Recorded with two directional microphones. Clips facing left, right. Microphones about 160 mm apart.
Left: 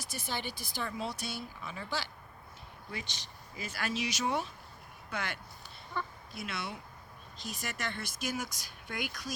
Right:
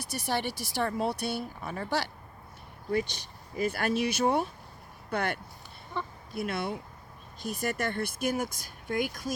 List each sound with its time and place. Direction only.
0.0 s speech: 70° right (ahead or behind)
0.9 s speech: 55° right (ahead or behind)
2.9 s speech: 50° right (ahead or behind)
6.0 s speech: 25° right (ahead or behind)
6.3 s speech: 55° right (ahead or behind)